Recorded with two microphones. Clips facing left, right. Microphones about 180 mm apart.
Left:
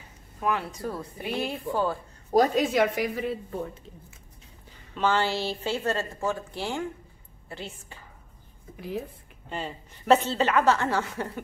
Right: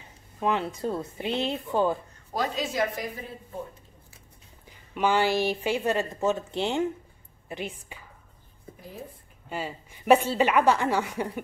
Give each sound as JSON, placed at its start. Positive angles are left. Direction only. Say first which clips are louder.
{"t": 0.4, "sound": "speech", "louder": "right 2 dB", "side_deg": -20}
{"t": 2.3, "sound": "a woman's voice", "louder": "left 7 dB", "side_deg": 50}
{"t": 4.6, "sound": "a woman's voice", "louder": "right 1 dB", "side_deg": -15}
{"t": 9.5, "sound": "a woman's voice", "louder": "right 1 dB", "side_deg": -5}